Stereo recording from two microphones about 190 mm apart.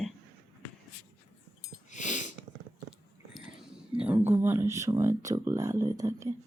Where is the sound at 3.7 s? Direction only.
5° right (ahead or behind).